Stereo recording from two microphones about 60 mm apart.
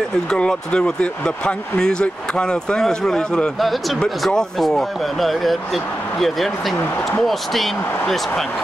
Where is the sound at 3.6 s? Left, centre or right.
Centre.